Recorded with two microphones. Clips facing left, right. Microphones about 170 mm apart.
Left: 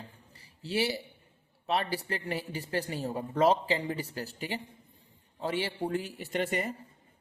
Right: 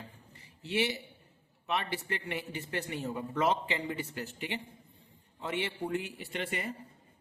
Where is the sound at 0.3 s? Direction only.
35° left (ahead or behind).